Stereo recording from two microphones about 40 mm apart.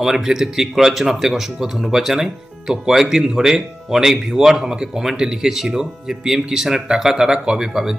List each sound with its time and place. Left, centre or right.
0.0 s speech: centre